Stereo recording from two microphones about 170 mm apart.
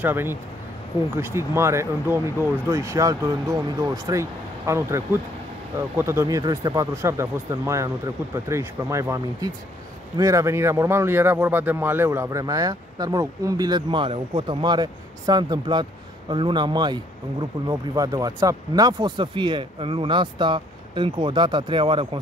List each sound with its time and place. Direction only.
0.0 s a man's voice: 15° right (ahead or behind); by 22.2 s 30° right (ahead or behind)